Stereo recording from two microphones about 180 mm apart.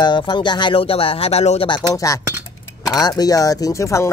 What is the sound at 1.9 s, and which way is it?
Speech, 20° left (ahead or behind).